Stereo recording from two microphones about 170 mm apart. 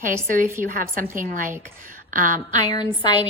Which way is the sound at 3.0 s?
25° left (ahead or behind).